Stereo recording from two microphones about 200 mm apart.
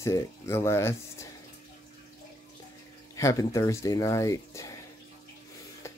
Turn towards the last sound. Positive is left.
turn(degrees=15)  # may be behind; listen again after turning